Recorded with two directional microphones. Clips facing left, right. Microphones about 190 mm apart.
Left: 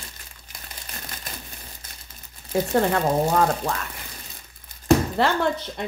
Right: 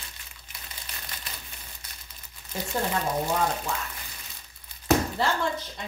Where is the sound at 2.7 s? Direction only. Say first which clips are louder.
Left 6 dB; 65° left (ahead or behind).